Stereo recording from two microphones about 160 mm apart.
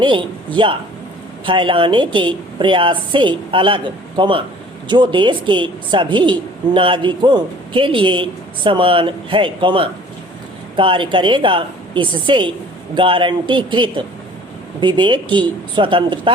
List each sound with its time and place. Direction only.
0.0 s a woman's voice: 30° right (ahead or behind)